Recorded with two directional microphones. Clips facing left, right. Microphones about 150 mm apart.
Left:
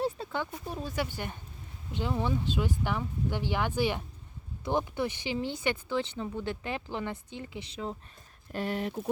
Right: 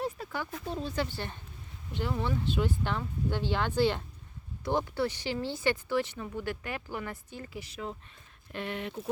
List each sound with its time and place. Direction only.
0.2 s a sound: 25° left (ahead or behind)
0.7 s speech: 10° left (ahead or behind)
8.5 s speech: 40° left (ahead or behind)